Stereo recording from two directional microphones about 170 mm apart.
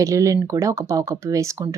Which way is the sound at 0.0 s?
20° right (ahead or behind).